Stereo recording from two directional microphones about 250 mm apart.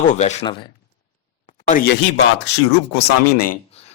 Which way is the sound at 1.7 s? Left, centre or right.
Left.